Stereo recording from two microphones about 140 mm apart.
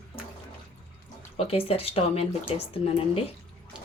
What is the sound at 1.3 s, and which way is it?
Speech, 45° left (ahead or behind).